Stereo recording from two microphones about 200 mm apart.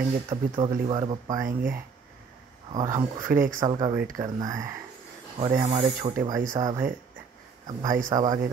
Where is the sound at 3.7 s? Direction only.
30° right (ahead or behind).